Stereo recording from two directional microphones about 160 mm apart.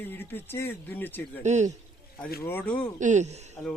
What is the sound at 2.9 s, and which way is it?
Speech, 50° right (ahead or behind).